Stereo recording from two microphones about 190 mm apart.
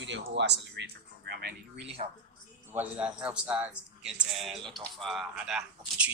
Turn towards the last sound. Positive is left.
turn(degrees=-5)  # may be behind; listen again after turning